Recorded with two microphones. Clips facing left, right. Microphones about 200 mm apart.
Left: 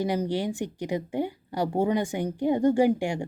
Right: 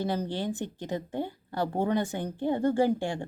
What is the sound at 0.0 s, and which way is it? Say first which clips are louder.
Speech: left 4 dB; 15° left (ahead or behind).